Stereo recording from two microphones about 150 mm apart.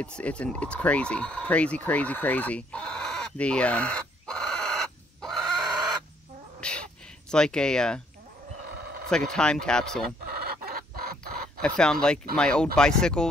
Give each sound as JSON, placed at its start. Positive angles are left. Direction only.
{"t": 0.0, "sound": "speech", "side_deg": 5}
{"t": 6.6, "sound": "a sound", "side_deg": 5}
{"t": 9.1, "sound": "speech", "side_deg": 5}
{"t": 10.2, "sound": "chicken", "side_deg": -90}
{"t": 11.6, "sound": "speech", "side_deg": 5}